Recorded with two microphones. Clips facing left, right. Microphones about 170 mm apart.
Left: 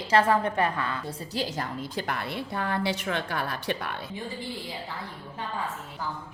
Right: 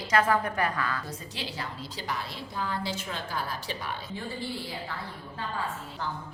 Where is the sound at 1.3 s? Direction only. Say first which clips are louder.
Left 8 dB; 45° left (ahead or behind); by 4.0 s 60° left (ahead or behind).